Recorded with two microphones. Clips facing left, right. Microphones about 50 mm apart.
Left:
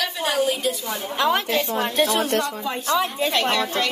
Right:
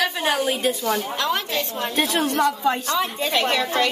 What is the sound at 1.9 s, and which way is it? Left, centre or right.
Speech, right.